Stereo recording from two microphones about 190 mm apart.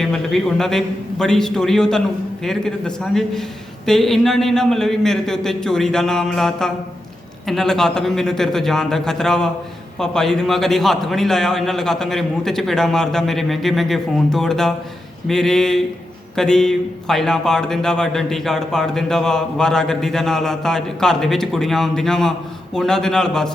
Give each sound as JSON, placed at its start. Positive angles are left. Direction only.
{"t": 0.0, "sound": "speech", "side_deg": 0}